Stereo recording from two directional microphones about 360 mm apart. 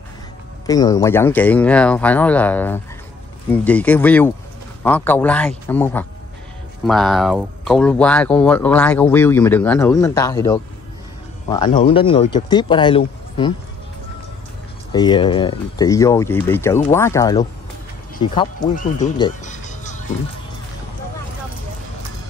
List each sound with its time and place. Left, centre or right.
0.7 s speech: centre
14.9 s speech: centre